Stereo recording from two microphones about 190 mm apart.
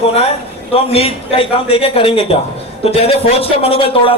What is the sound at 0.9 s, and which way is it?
A man's voice, 30° left (ahead or behind).